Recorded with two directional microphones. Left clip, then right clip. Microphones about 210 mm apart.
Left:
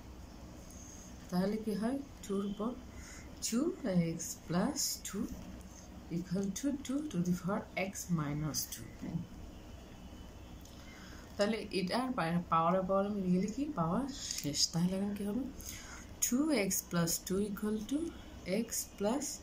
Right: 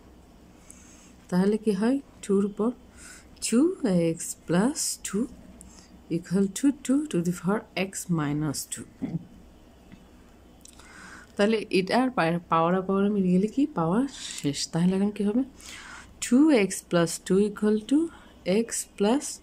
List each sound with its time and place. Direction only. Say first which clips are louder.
1.3 s speech: right 11 dB; 50° right (ahead or behind)
3.3 s speech: right 12 dB; 50° right (ahead or behind)
6.3 s speech: right 12 dB; 55° right (ahead or behind)
11.3 s speech: right 10 dB; 50° right (ahead or behind)